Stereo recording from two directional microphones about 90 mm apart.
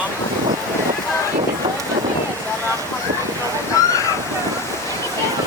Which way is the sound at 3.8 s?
35° left (ahead or behind).